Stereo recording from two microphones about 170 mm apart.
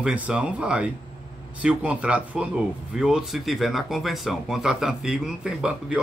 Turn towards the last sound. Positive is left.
turn(degrees=-5)  # may be behind; listen again after turning